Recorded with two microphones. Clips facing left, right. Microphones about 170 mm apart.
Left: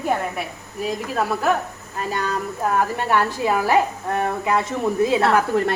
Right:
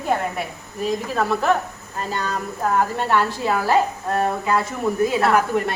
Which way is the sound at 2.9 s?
15° left (ahead or behind).